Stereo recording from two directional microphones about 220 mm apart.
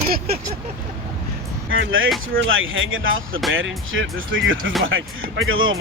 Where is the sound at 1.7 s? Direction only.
65° right (ahead or behind).